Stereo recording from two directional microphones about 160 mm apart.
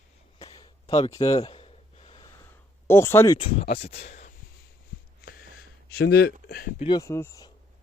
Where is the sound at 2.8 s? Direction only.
15° left (ahead or behind).